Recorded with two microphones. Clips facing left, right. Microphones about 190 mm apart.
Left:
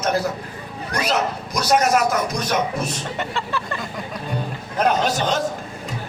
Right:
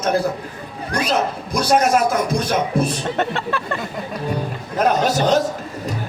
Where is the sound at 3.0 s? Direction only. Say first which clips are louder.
Right 5 dB; 60° right (ahead or behind).